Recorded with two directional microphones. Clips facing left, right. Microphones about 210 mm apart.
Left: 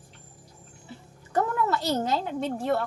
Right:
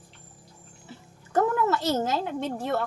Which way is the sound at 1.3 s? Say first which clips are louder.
Right 2 dB; centre (ahead or behind).